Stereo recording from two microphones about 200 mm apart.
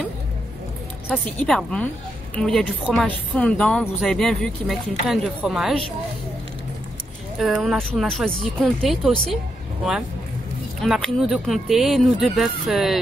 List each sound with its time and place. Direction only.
1.0 s a woman's voice: 5° left (ahead or behind)
7.3 s speech: centre (ahead or behind)
10.8 s speech: centre (ahead or behind)